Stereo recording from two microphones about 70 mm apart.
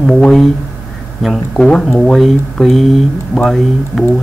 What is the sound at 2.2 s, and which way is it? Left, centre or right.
Speech, centre.